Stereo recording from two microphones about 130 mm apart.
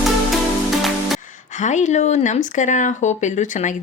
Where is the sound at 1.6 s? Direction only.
65° left (ahead or behind).